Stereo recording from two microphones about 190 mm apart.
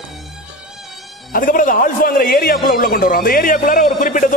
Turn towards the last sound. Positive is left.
turn(degrees=45)  # may be behind; listen again after turning